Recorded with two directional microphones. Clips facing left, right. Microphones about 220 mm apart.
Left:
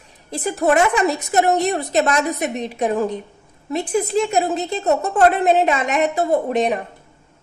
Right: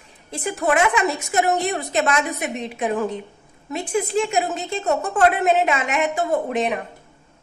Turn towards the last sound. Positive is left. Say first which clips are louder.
# left 3 dB
turn(degrees=40)  # may be behind; listen again after turning